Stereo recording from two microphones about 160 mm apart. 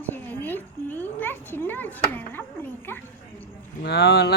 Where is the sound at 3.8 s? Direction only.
90° left.